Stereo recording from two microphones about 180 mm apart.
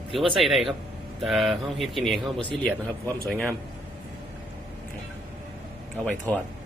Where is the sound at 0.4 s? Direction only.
Centre (ahead or behind).